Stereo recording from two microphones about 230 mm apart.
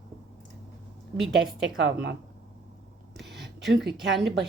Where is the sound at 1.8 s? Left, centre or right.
Right.